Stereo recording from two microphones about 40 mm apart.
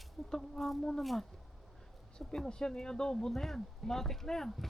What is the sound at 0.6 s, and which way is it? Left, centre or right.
Speech, centre.